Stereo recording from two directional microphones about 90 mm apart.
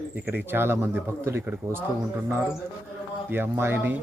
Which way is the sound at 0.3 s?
25° right (ahead or behind).